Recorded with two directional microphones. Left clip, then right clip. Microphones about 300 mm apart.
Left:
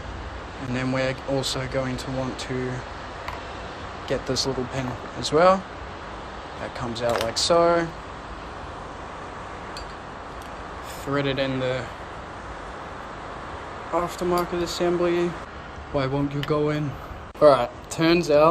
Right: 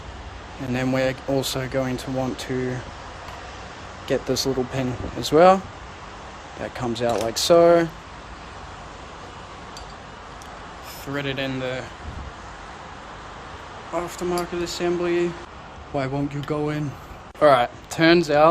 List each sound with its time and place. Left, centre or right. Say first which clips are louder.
0.7 s speech: right 3 dB; right
4.1 s speech: right 3 dB; right
6.7 s speech: right 1 dB; right
11.1 s speech: left 2 dB; centre
13.9 s speech: left 2 dB; centre